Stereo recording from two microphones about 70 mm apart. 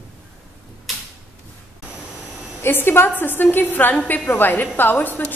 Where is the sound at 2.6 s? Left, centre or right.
Left.